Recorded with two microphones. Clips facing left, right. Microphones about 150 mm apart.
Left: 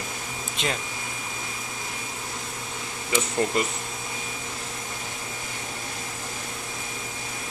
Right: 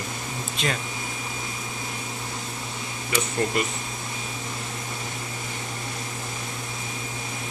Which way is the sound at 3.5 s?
25° left (ahead or behind).